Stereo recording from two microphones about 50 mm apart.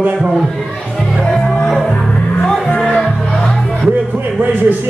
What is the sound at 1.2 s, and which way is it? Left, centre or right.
Music, centre.